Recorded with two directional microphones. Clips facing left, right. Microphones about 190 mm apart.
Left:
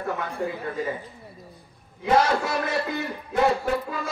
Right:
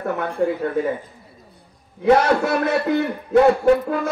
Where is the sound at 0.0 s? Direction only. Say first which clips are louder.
Right 7 dB; 60° right (ahead or behind).